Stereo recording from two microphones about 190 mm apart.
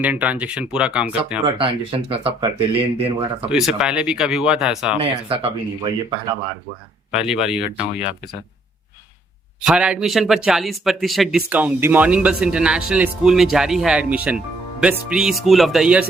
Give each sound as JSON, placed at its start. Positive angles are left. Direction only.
{"t": 0.0, "sound": "speech", "side_deg": -5}
{"t": 1.5, "sound": "speech", "side_deg": -30}
{"t": 3.5, "sound": "a man's voice", "side_deg": -5}
{"t": 4.9, "sound": "speech", "side_deg": -30}
{"t": 7.1, "sound": "a man's voice", "side_deg": -5}
{"t": 9.6, "sound": "a man's voice", "side_deg": -5}